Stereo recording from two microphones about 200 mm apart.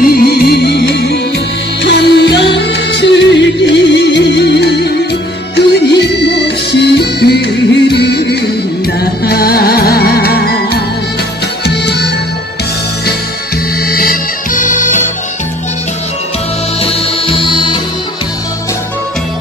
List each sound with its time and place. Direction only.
0.0 s music: 50° left (ahead or behind)
13.8 s music: 50° left (ahead or behind)
16.8 s music: 25° left (ahead or behind)